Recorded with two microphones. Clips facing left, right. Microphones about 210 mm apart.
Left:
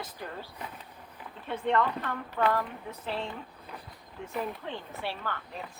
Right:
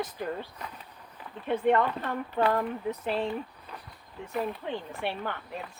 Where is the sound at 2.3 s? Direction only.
25° right (ahead or behind).